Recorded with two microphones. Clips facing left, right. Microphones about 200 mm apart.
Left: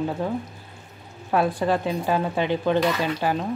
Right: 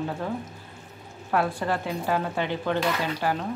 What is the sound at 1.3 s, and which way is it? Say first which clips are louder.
Speech: left 4 dB; 15° left (ahead or behind).